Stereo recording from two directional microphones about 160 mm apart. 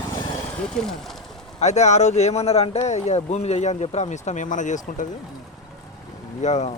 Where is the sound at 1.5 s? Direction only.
45° left (ahead or behind).